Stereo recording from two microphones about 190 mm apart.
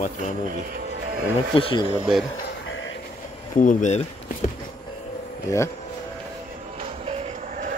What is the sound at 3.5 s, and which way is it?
Speech, 40° left (ahead or behind).